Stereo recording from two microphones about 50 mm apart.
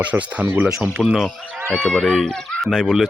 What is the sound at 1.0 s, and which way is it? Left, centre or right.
Speech, centre.